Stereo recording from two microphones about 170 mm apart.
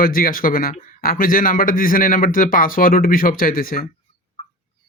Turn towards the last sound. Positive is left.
turn(degrees=55)  # may be behind; listen again after turning